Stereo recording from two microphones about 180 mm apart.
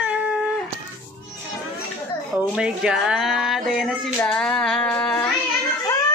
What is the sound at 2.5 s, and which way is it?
Speech, 5° right (ahead or behind).